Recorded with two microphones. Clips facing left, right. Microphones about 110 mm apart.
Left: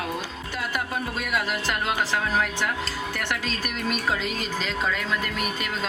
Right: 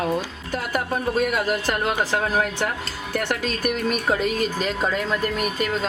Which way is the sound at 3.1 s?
45° right (ahead or behind).